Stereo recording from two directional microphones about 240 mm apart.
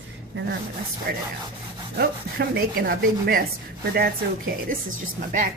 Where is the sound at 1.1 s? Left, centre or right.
Right.